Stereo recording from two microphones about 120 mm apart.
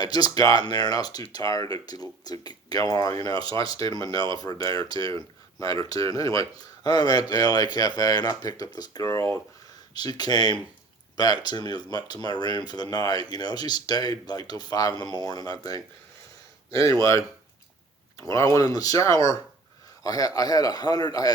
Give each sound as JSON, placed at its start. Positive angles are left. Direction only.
{"t": 0.0, "sound": "speech", "side_deg": 35}
{"t": 18.2, "sound": "speech", "side_deg": 25}